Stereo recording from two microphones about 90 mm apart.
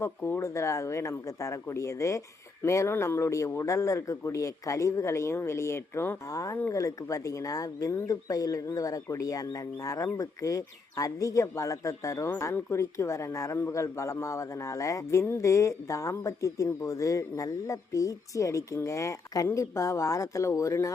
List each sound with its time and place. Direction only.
0.2 s a man's voice: 25° left (ahead or behind)
6.3 s a man's voice: 40° left (ahead or behind)